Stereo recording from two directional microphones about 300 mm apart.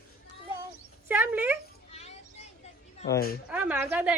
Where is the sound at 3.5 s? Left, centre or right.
Centre.